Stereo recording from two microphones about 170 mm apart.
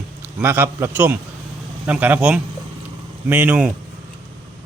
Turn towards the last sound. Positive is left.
turn(degrees=-10)  # may be behind; listen again after turning